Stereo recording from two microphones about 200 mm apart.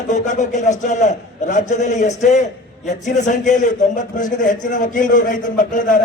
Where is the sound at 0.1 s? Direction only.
35° left (ahead or behind).